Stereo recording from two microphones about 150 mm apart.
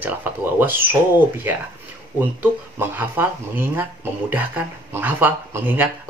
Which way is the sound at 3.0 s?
10° right (ahead or behind).